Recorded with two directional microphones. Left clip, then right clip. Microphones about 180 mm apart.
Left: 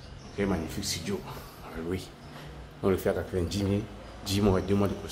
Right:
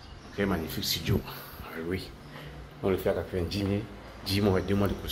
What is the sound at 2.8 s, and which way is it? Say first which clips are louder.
Speech: even; 20° left (ahead or behind).